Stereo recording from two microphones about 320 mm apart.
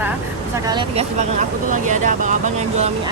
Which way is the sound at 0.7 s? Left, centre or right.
Centre.